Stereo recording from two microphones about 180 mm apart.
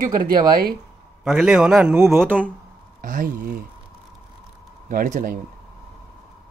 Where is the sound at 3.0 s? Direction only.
50° right (ahead or behind).